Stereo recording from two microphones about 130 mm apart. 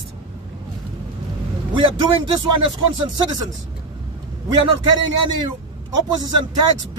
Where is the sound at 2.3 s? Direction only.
35° right (ahead or behind).